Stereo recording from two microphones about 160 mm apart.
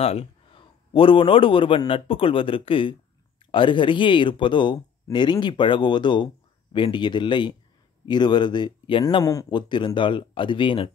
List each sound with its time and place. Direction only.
0.0 s a man's voice: 35° left (ahead or behind)